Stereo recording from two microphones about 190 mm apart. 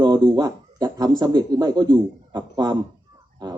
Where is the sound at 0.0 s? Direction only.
25° right (ahead or behind).